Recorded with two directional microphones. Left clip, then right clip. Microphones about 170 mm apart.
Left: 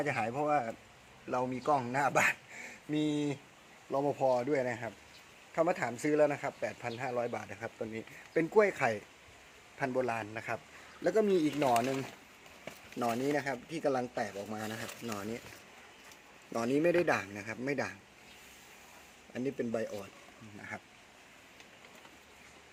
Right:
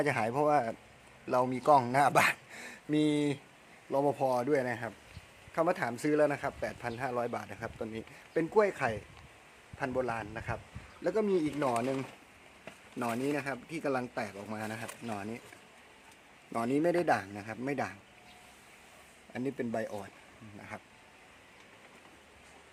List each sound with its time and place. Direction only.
0.0 s speech: 25° right (ahead or behind); by 8.0 s 5° right (ahead or behind)
8.3 s a man's voice: 5° left (ahead or behind)
13.0 s speech: 10° right (ahead or behind)
16.5 s speech: 20° right (ahead or behind)
19.3 s speech: 20° right (ahead or behind)
20.6 s speech: centre (ahead or behind)